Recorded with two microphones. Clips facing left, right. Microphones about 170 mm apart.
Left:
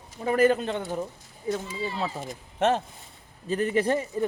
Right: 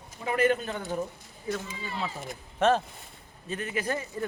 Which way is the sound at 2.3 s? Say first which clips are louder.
Right 1 dB; 20° left (ahead or behind).